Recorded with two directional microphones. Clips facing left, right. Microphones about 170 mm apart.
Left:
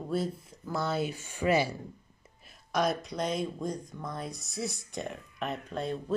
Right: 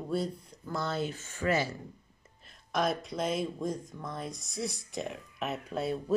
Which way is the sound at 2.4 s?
Centre (ahead or behind).